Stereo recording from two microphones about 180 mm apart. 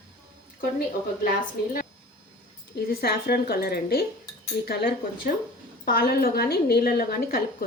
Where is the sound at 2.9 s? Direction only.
60° left (ahead or behind).